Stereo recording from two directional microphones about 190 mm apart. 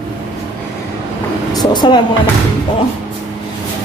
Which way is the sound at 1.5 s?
20° left (ahead or behind).